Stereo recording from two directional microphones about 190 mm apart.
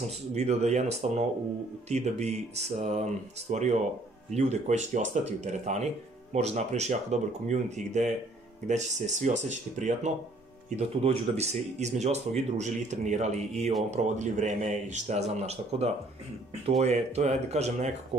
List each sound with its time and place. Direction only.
0.3 s speech: 35° right (ahead or behind)